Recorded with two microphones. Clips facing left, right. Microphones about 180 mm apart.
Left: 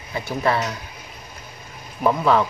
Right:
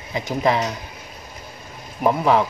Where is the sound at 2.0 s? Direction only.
15° right (ahead or behind).